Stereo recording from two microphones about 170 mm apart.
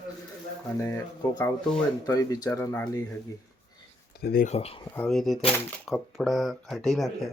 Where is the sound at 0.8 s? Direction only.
15° left (ahead or behind).